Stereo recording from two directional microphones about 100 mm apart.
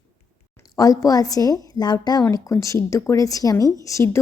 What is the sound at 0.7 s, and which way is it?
A woman's voice, 35° left (ahead or behind).